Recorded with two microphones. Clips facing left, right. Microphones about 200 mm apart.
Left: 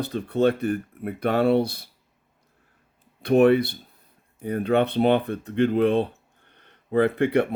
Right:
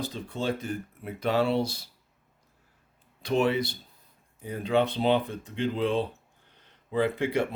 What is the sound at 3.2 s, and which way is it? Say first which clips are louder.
Speech: left 8 dB; 60° left (ahead or behind).